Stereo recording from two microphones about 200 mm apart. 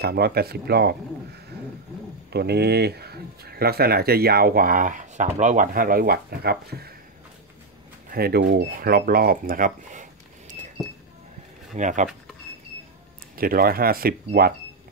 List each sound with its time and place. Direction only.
0.0 s speech: 50° right (ahead or behind)
8.1 s speech: 50° right (ahead or behind)
11.7 s speech: 40° right (ahead or behind)
13.4 s speech: 45° right (ahead or behind)